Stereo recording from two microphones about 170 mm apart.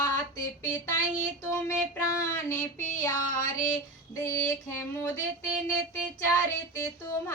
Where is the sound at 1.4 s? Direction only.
15° left (ahead or behind).